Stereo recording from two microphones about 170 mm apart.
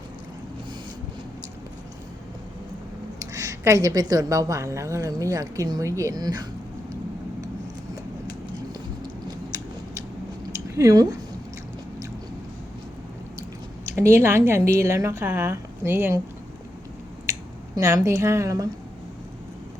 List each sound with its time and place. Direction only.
3.2 s a woman's voice: 20° right (ahead or behind)
10.8 s a woman's voice: 20° right (ahead or behind)
13.9 s a woman's voice: 15° right (ahead or behind)
17.3 s a sound: 15° right (ahead or behind)
17.7 s a woman's voice: 20° right (ahead or behind)